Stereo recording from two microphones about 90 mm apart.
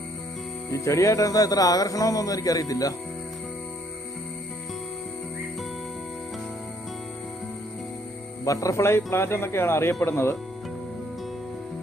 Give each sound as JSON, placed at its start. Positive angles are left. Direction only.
{"t": 0.7, "sound": "speech", "side_deg": 35}
{"t": 8.4, "sound": "speech", "side_deg": 35}